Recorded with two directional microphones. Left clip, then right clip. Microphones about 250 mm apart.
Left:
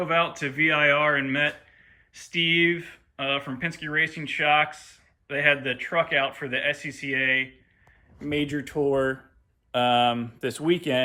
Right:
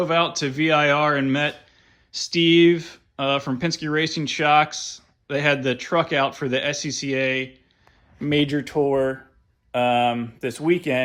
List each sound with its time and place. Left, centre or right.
0.0 s speech: centre
8.3 s speech: right
8.8 s speech: centre